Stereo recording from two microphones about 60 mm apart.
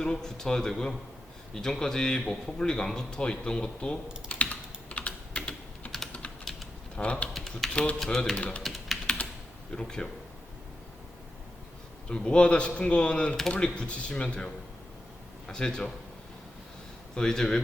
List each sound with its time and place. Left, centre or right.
0.0 s a man's voice: centre
4.3 s typing: left
6.4 s typing: centre
6.9 s speech: left
7.3 s speech: centre
7.7 s a man's voice: centre
7.9 s speech: centre
8.4 s speech: left
9.7 s a man's voice: centre
12.0 s a man's voice: centre
17.2 s a man's voice: centre